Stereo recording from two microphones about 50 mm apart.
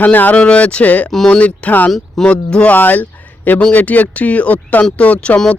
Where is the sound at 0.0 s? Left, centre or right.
Left.